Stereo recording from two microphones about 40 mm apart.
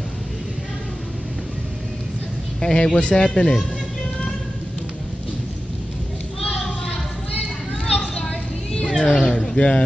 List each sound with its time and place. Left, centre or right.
2.6 s speech: centre
8.7 s cat: left
9.2 s a sound: centre
9.6 s speech: left